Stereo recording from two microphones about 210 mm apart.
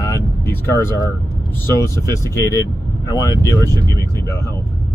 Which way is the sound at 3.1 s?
15° left (ahead or behind).